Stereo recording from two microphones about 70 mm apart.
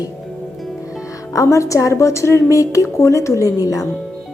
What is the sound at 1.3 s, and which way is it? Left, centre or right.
Speech, left.